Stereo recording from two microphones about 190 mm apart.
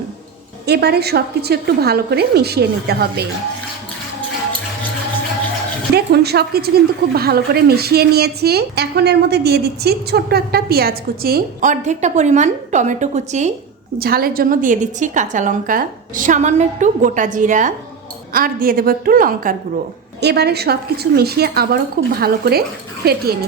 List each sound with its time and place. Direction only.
0.6 s a woman's voice: 60° right (ahead or behind)
5.9 s a woman's voice: 60° right (ahead or behind); by 13.5 s 40° right (ahead or behind)
14.0 s a woman's voice: 50° right (ahead or behind)
20.2 s a woman's voice: 60° right (ahead or behind)